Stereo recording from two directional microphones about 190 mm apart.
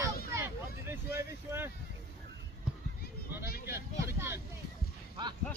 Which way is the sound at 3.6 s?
15° right (ahead or behind).